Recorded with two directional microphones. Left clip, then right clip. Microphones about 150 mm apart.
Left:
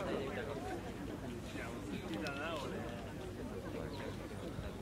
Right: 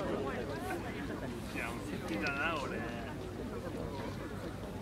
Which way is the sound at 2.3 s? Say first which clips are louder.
Right 9 dB; 10° left (ahead or behind).